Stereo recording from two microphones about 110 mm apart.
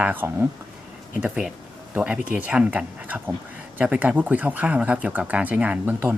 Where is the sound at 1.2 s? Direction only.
5° right (ahead or behind).